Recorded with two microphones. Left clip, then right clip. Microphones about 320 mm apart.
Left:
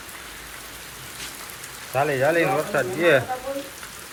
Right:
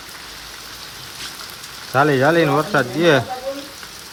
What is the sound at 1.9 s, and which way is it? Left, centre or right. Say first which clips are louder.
Speech: right 6 dB; right.